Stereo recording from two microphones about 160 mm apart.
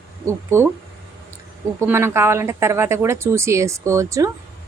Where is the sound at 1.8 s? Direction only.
15° right (ahead or behind).